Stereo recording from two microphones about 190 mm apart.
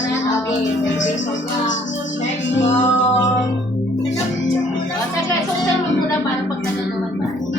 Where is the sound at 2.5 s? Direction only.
70° left (ahead or behind).